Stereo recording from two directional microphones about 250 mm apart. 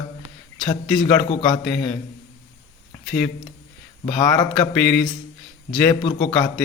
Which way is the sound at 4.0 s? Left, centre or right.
Centre.